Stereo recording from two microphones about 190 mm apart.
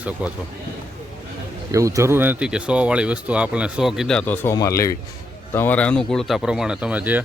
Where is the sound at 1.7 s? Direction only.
15° right (ahead or behind).